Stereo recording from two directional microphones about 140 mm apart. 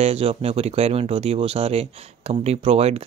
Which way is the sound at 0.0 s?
45° right (ahead or behind).